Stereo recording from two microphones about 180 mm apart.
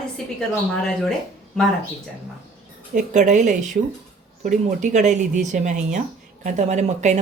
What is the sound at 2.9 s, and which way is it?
Speech, 40° right (ahead or behind).